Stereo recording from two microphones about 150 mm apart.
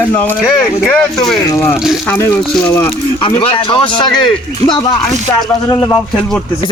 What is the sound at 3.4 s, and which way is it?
Speech, 35° left (ahead or behind).